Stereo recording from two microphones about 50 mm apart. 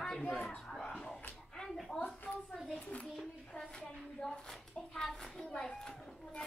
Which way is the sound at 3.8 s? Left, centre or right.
Centre.